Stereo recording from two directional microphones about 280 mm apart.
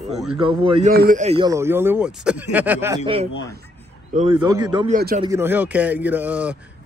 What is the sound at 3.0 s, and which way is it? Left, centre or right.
A man's voice, centre.